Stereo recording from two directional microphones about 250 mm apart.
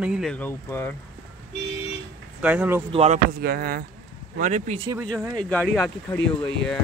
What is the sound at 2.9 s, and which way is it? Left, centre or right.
Speech, right.